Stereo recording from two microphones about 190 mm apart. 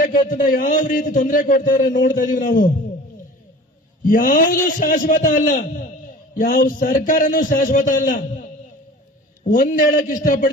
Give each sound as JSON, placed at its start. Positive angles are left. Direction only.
{"t": 0.1, "sound": "a man's voice", "side_deg": 45}
{"t": 4.1, "sound": "a man's voice", "side_deg": 45}
{"t": 9.4, "sound": "a man's voice", "side_deg": 45}